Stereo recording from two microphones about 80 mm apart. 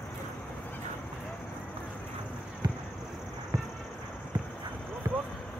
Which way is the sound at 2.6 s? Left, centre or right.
Right.